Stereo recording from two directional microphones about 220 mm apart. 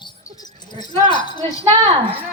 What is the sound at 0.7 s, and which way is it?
Speech, 20° left (ahead or behind).